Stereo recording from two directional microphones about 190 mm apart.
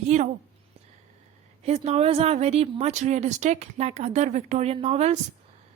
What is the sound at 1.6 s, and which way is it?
A woman's voice, 35° right (ahead or behind).